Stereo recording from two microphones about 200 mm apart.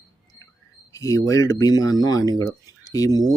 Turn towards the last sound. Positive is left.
turn(degrees=20)  # may be behind; listen again after turning